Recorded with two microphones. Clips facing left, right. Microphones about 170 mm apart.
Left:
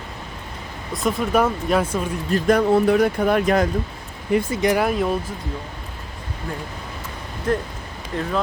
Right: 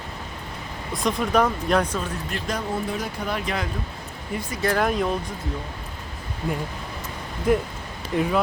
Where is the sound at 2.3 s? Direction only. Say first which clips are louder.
Left 13 dB; 55° left (ahead or behind).